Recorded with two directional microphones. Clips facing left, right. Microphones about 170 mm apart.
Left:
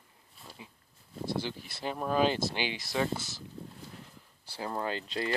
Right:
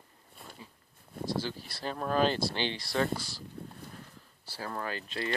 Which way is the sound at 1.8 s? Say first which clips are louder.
Even; 10° left (ahead or behind).